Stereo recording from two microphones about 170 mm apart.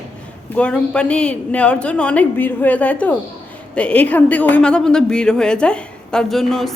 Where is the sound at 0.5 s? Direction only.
5° left (ahead or behind).